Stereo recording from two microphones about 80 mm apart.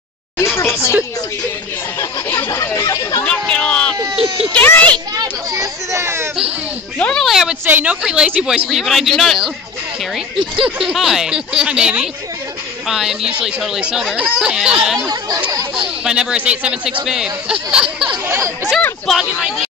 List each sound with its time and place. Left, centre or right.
0.4 s a sound: left
2.5 s speech: left
3.3 s a sound: centre
4.6 s a child's voice: left
5.5 s speech: right
7.0 s speech: centre
7.6 s speech: right; by 9.5 s centre
10.6 s speech: centre
15.0 s speech: right
16.0 s speech: centre
18.2 s speech: right
19.0 s speech: centre